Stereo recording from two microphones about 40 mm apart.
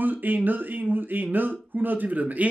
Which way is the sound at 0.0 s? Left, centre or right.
Right.